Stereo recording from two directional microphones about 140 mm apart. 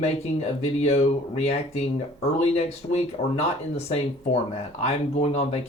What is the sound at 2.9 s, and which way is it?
Speech, 50° left (ahead or behind).